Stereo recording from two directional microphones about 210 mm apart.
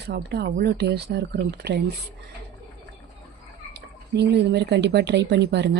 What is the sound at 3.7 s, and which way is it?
Speech, 55° right (ahead or behind).